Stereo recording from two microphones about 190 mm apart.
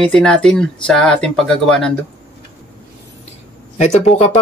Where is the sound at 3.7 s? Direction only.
35° left (ahead or behind).